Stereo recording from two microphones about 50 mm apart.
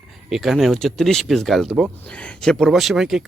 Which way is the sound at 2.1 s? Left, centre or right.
Left.